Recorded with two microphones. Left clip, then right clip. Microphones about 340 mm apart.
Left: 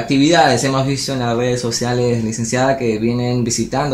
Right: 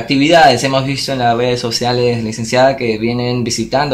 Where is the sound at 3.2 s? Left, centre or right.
Right.